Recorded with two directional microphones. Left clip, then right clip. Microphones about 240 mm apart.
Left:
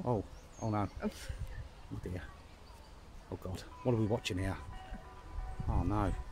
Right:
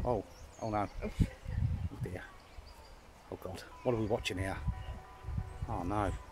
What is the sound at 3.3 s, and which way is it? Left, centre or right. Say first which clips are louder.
Speech: right 1 dB; centre.